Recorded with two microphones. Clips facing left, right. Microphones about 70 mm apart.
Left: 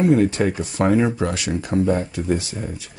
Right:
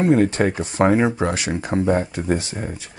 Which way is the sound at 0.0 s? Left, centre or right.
Right.